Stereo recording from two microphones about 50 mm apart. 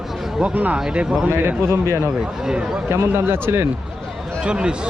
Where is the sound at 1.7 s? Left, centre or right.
Right.